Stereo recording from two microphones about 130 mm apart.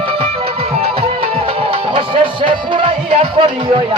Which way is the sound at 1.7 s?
40° right (ahead or behind).